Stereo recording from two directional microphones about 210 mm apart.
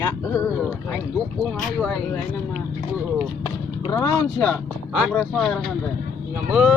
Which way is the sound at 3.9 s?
15° left (ahead or behind).